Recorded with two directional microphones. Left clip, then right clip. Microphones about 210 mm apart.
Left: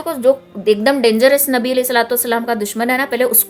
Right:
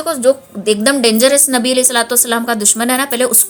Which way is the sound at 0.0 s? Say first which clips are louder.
Right 1 dB; centre (ahead or behind).